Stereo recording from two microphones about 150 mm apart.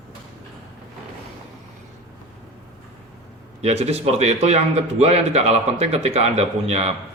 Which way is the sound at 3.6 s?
45° right (ahead or behind).